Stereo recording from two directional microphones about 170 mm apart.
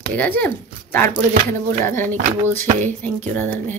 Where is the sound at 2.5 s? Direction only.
10° left (ahead or behind).